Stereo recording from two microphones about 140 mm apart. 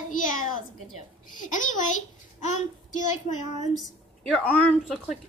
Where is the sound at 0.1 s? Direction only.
70° left (ahead or behind).